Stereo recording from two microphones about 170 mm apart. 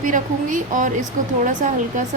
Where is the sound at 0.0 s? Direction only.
50° right (ahead or behind).